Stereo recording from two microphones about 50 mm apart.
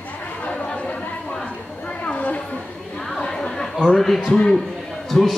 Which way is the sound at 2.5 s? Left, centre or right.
Centre.